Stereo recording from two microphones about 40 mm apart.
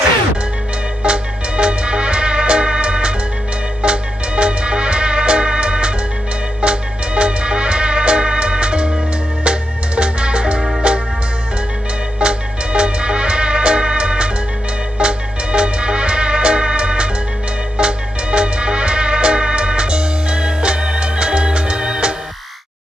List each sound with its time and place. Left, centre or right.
1.0 s music: right
12.2 s music: right